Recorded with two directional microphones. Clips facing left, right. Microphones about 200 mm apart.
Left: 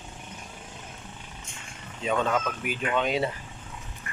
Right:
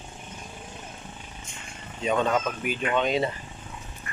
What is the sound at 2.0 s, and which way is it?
Speech, centre (ahead or behind).